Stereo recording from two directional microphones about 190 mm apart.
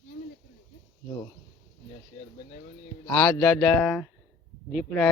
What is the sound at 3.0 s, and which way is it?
Speech, 20° left (ahead or behind).